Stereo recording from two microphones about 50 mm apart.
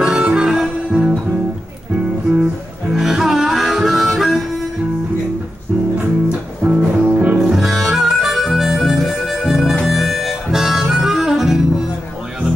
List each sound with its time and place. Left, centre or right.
0.0 s harmonica: centre
2.9 s harmonica: centre
6.6 s music: right
7.5 s harmonica: centre